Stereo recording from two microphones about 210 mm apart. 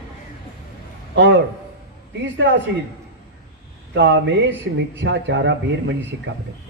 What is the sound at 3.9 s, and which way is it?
A man's voice, 60° right (ahead or behind).